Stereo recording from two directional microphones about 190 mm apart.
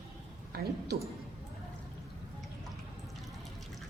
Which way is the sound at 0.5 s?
55° right (ahead or behind).